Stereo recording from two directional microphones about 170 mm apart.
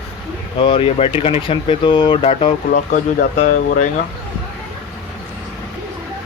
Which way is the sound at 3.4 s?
50° left (ahead or behind).